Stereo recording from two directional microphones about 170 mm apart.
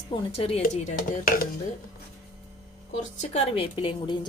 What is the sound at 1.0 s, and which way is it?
Chopping, 60° left (ahead or behind).